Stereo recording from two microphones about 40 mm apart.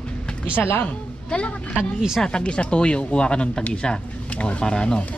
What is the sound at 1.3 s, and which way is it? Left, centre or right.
A child's voice, left.